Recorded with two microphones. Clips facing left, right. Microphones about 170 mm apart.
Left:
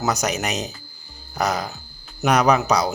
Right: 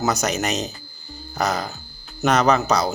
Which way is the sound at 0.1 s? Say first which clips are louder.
Right 1 dB; 10° left (ahead or behind).